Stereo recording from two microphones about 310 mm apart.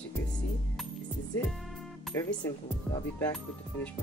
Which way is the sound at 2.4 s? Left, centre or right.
Centre.